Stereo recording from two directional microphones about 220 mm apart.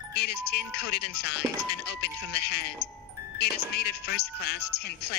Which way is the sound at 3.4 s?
50° left (ahead or behind).